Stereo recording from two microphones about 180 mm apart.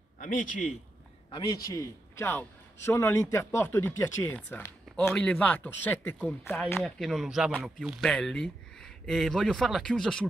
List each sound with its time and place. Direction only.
0.2 s a man's voice: 45° left (ahead or behind)
1.3 s a man's voice: 20° left (ahead or behind); by 10.2 s 5° left (ahead or behind)